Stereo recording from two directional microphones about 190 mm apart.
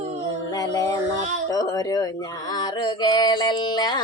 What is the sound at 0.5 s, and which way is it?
Music, 20° left (ahead or behind).